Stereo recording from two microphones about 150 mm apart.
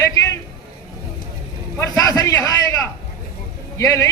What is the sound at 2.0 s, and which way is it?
A man's voice, 25° left (ahead or behind).